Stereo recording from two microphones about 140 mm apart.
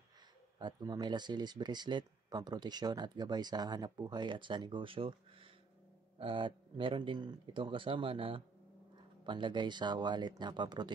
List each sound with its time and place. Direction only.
0.6 s speech: 30° right (ahead or behind)